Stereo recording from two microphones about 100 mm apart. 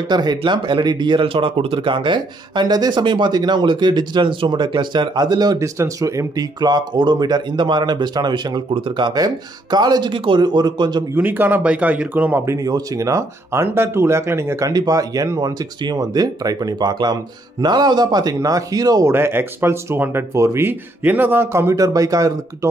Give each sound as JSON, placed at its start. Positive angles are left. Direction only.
{"t": 0.1, "sound": "speech", "side_deg": -45}
{"t": 10.1, "sound": "speech", "side_deg": -55}
{"t": 11.1, "sound": "speech", "side_deg": -20}
{"t": 12.5, "sound": "speech", "side_deg": -35}
{"t": 14.7, "sound": "speech", "side_deg": -40}
{"t": 19.1, "sound": "speech", "side_deg": -25}